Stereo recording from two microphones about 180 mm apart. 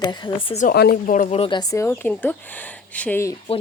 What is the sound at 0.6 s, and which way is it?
A woman's voice, 60° left (ahead or behind).